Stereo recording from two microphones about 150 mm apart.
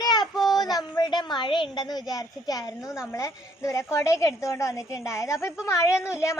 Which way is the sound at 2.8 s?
5° right (ahead or behind).